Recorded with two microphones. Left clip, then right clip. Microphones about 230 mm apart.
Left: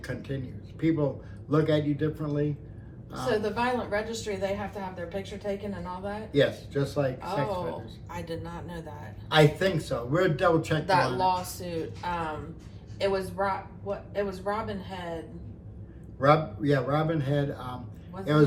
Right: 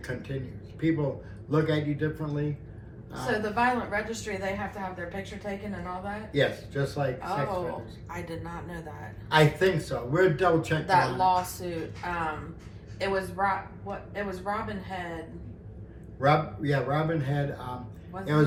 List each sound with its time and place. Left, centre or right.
0.0 s a woman's voice: centre
16.2 s a woman's voice: centre